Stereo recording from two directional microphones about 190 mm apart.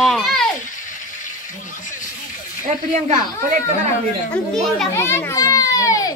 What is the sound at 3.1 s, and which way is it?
Speech, 40° right (ahead or behind).